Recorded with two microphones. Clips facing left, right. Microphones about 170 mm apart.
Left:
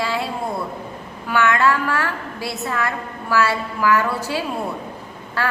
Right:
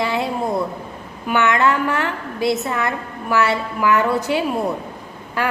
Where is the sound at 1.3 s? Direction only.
20° right (ahead or behind).